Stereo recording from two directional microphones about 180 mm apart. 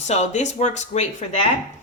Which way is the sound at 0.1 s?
40° left (ahead or behind).